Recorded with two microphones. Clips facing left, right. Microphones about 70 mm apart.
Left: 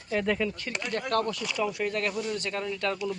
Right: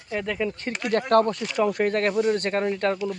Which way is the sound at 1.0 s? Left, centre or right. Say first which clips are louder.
Right 8 dB; right.